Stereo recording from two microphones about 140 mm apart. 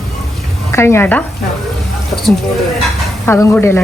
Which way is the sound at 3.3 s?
20° left (ahead or behind).